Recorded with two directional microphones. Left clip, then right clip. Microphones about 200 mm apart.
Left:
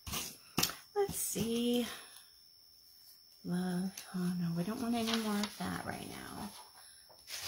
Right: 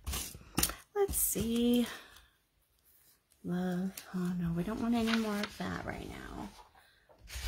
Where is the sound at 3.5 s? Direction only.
50° right (ahead or behind).